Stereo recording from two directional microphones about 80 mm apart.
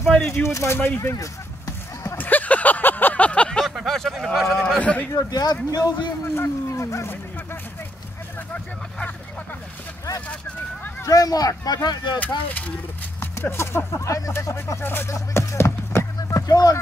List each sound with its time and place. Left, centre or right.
0.3 s speech: left
1.1 s a sound: left
2.1 s vehicle: left
3.6 s speech: centre
4.7 s a man's voice: centre
5.1 s speech: left
6.2 s speech: left
11.1 s speech: left
12.4 s speech: centre
13.2 s speech: left
15.1 s music: left
16.2 s a sound: left